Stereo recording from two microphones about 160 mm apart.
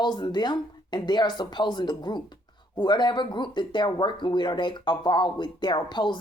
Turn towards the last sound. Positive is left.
turn(degrees=30)  # may be behind; listen again after turning